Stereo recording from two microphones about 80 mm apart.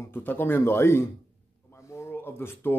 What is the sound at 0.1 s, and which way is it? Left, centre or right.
Speech, left.